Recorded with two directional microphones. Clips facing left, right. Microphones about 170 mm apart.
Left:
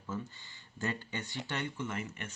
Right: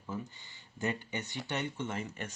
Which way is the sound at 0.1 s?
15° right (ahead or behind).